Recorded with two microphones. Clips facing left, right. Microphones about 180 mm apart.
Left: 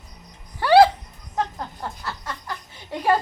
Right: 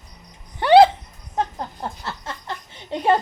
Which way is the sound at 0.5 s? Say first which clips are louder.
Right 2 dB; 20° right (ahead or behind).